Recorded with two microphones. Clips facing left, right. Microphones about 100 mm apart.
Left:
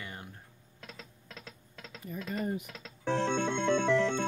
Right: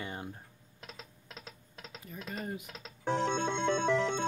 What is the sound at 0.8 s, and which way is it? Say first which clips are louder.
Music: left 1 dB; 20° right (ahead or behind).